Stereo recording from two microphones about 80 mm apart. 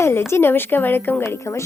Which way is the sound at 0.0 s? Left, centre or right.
Left.